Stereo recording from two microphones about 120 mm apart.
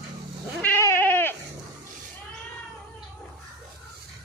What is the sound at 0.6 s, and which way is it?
Cat, 20° left (ahead or behind).